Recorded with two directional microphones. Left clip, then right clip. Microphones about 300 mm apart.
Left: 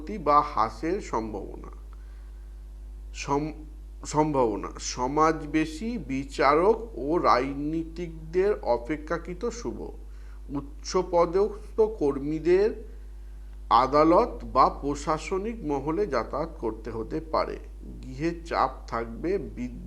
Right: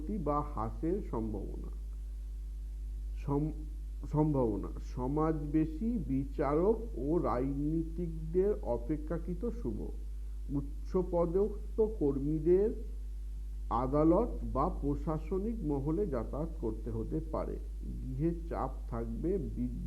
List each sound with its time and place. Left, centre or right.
0.0 s a man's voice: centre
1.3 s speech: left
3.2 s a man's voice: centre
11.0 s a man's voice: centre
14.9 s a man's voice: centre